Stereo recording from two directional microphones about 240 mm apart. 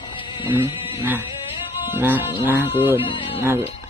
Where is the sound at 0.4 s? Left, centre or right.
Centre.